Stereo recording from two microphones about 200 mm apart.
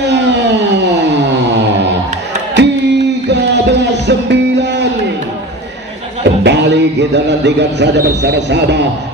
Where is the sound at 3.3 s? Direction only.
60° right (ahead or behind).